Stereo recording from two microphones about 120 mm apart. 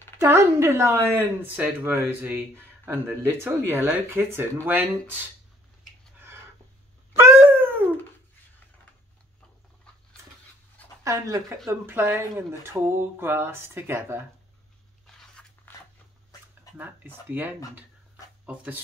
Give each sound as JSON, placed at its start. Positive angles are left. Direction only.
{"t": 0.2, "sound": "speech", "side_deg": -25}
{"t": 7.2, "sound": "dog", "side_deg": -20}
{"t": 11.1, "sound": "speech", "side_deg": -25}
{"t": 15.0, "sound": "biting", "side_deg": 5}
{"t": 16.7, "sound": "speech", "side_deg": -15}